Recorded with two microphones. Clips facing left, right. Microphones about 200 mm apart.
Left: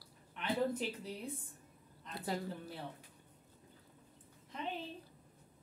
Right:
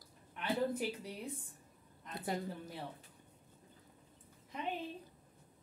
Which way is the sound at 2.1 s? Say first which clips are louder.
Even; 20° right (ahead or behind).